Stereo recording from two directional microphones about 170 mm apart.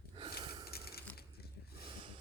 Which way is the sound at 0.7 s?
65° left (ahead or behind).